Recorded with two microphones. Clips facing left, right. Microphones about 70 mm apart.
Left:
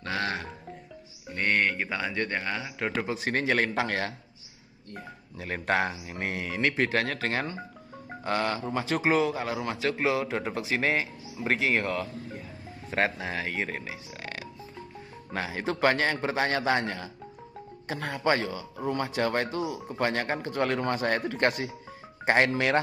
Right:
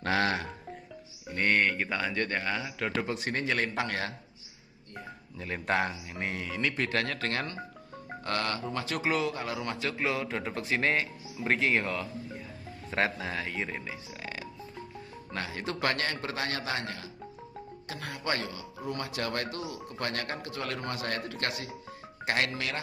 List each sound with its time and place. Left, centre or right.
0.0 s music: right
1.3 s a man's voice: centre
3.5 s speech: left
5.4 s speech: centre
6.2 s speech: left
6.8 s a man's voice: centre
9.3 s a man's voice: centre
13.4 s speech: left
13.8 s a man's voice: centre; by 16.5 s left
16.5 s a man's voice: left
18.8 s speech: left
20.4 s a man's voice: left
22.2 s speech: left